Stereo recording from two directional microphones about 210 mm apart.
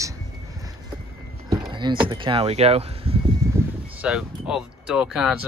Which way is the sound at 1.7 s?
20° right (ahead or behind).